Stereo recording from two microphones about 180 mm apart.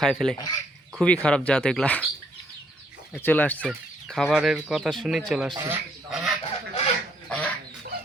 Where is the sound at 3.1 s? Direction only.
10° left (ahead or behind).